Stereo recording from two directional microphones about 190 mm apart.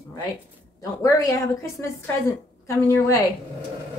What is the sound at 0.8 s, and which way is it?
A woman's voice, 15° left (ahead or behind).